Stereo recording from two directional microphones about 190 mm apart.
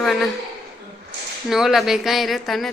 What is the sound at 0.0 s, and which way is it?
Speech, centre (ahead or behind).